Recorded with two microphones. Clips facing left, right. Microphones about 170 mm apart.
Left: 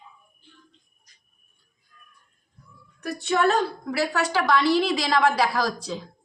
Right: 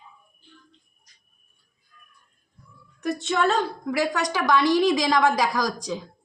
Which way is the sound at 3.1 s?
20° right (ahead or behind).